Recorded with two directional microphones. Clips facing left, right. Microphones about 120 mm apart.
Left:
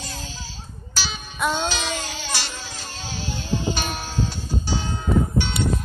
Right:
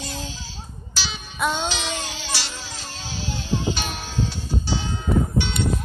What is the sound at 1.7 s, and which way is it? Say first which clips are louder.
Music: left 1 dB; 45° left (ahead or behind).